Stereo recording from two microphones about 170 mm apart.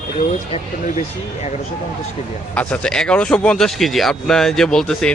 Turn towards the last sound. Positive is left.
turn(degrees=5)  # may be behind; listen again after turning